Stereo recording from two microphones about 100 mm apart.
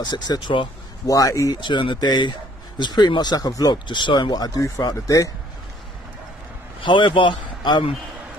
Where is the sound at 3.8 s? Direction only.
50° left (ahead or behind); by 5.3 s 35° left (ahead or behind).